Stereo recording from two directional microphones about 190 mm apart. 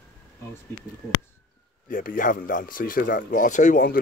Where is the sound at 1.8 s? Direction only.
45° left (ahead or behind).